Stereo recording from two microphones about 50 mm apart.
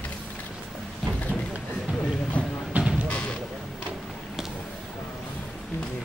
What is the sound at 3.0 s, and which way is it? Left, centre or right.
Music, left.